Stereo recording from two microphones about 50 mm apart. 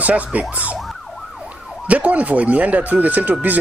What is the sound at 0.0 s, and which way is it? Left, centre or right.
Speech, right.